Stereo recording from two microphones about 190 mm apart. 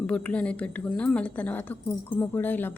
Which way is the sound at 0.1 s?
5° left (ahead or behind).